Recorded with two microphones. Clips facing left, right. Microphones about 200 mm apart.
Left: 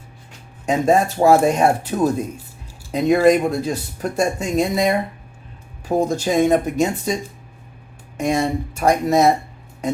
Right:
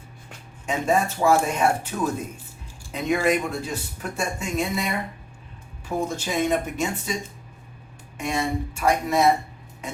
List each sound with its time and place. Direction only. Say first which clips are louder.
0.6 s speech: left 6 dB; 40° left (ahead or behind)
8.2 s speech: left 6 dB; 40° left (ahead or behind)